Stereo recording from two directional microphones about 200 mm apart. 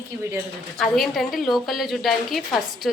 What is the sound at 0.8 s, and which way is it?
A woman's voice, centre (ahead or behind).